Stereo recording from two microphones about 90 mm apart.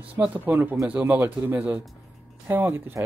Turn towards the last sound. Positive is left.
turn(degrees=-25)  # may be behind; listen again after turning